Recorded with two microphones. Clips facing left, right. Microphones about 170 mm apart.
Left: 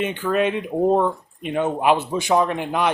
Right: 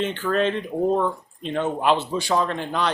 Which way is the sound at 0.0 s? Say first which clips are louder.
Left 1 dB; 10° left (ahead or behind).